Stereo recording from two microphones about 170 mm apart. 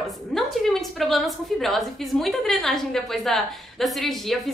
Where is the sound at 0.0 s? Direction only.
Centre (ahead or behind).